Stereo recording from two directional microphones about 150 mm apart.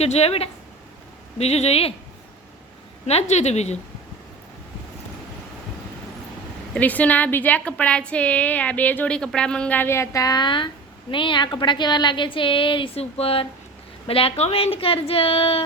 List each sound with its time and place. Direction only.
0.0 s a woman's voice: 45° left (ahead or behind)
3.1 s a woman's voice: 45° left (ahead or behind)
6.7 s a woman's voice: 10° left (ahead or behind); by 15.6 s 40° left (ahead or behind)